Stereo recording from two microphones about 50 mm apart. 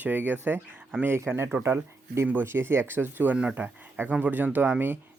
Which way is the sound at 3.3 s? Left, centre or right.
Right.